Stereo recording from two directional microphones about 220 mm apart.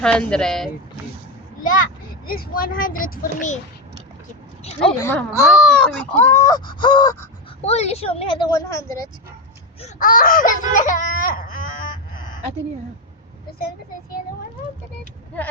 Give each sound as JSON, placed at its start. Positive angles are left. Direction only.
{"t": 0.0, "sound": "speech", "side_deg": 5}
{"t": 2.2, "sound": "baby cry", "side_deg": 40}
{"t": 4.9, "sound": "speech", "side_deg": 10}
{"t": 5.5, "sound": "speech", "side_deg": 0}
{"t": 7.6, "sound": "a woman's voice", "side_deg": 30}
{"t": 9.8, "sound": "baby cry", "side_deg": 40}